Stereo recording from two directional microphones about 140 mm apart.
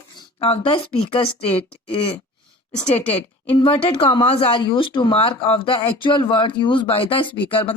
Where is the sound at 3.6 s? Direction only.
40° left (ahead or behind).